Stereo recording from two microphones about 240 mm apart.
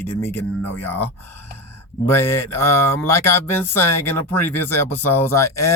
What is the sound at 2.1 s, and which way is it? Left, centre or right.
Speech, centre.